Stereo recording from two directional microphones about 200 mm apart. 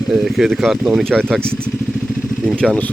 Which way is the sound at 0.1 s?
Centre (ahead or behind).